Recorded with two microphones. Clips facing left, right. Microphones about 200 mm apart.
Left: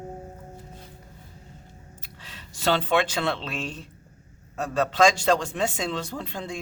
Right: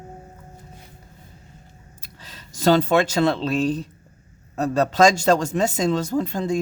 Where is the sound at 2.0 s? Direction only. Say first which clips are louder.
Right 3 dB; 40° right (ahead or behind).